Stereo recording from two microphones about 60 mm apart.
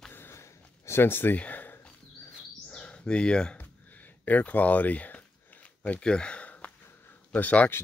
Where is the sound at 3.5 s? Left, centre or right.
Left.